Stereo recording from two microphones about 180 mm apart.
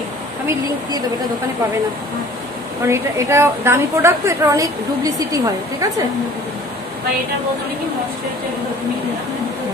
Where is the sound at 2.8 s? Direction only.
15° right (ahead or behind).